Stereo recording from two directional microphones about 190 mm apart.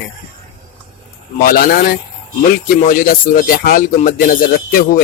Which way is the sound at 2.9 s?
45° left (ahead or behind).